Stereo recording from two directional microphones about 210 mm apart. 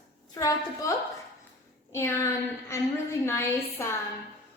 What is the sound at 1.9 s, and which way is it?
A woman's voice, 15° left (ahead or behind).